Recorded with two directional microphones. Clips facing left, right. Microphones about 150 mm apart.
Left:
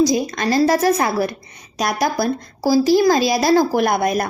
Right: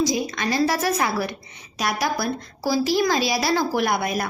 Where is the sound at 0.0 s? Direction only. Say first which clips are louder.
Left 6 dB; 45° left (ahead or behind).